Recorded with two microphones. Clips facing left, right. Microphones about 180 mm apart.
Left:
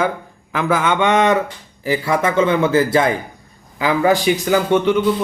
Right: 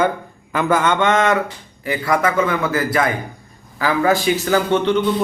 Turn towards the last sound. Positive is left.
turn(degrees=10)  # may be behind; listen again after turning